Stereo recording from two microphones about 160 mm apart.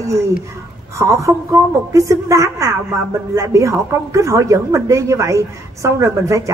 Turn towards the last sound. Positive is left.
turn(degrees=-20)  # may be behind; listen again after turning